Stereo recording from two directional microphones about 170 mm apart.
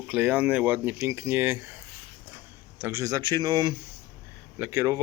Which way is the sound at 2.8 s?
15° right (ahead or behind).